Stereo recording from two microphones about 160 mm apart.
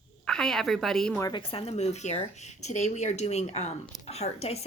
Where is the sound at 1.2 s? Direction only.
30° left (ahead or behind).